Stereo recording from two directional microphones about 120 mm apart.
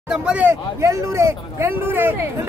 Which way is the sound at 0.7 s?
25° right (ahead or behind).